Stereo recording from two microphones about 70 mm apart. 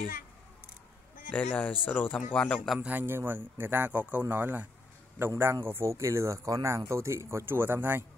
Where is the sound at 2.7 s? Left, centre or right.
Right.